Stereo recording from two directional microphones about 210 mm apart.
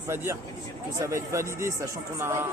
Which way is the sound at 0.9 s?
15° right (ahead or behind).